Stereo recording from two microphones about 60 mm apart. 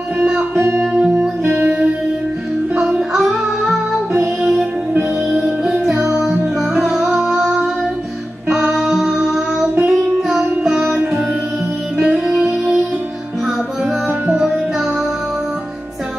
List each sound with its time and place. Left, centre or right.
0.2 s music: centre
0.6 s music: right
2.7 s music: centre
8.7 s music: centre
12.0 s music: centre